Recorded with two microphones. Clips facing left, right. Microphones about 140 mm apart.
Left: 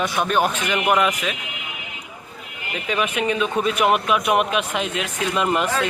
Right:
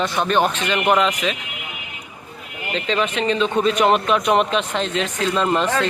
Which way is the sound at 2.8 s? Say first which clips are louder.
Right 1 dB; 10° left (ahead or behind).